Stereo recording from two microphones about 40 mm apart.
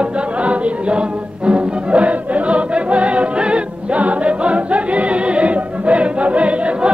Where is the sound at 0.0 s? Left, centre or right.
Right.